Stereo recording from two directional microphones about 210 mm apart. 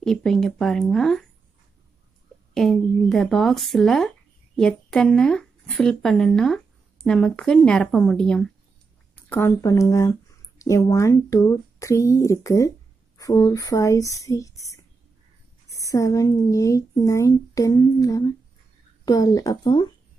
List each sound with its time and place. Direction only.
0.0 s speech: centre (ahead or behind)
2.5 s speech: centre (ahead or behind); by 19.9 s 20° left (ahead or behind)